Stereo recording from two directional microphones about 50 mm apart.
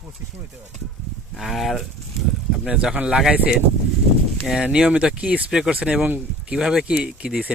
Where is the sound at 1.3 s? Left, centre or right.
Centre.